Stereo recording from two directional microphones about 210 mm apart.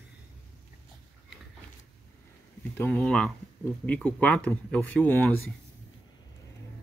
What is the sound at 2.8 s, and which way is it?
Speech, 5° left (ahead or behind).